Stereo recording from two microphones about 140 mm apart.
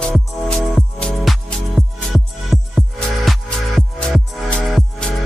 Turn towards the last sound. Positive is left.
turn(degrees=5)  # may be behind; listen again after turning